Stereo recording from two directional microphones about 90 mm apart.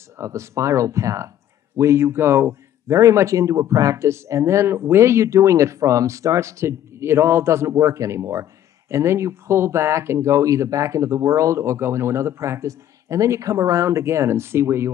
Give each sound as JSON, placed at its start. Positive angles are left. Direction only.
{"t": 0.2, "sound": "a man's voice", "side_deg": -35}